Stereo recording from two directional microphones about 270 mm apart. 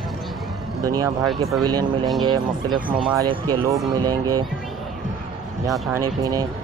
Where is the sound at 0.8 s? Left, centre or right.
Centre.